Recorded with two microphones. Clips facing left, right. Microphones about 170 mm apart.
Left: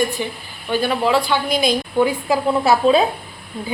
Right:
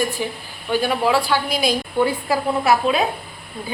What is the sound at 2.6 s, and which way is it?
Speech, 30° left (ahead or behind).